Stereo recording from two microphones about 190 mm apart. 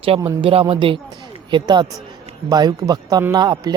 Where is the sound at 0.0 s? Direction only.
25° right (ahead or behind).